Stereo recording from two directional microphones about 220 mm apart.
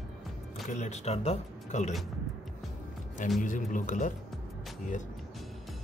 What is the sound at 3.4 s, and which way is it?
Speech, 35° left (ahead or behind).